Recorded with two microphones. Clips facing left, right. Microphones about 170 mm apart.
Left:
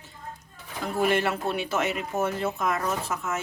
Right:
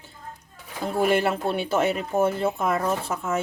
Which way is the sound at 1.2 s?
30° right (ahead or behind).